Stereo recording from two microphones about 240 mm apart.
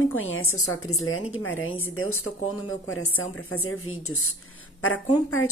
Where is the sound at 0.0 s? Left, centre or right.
Left.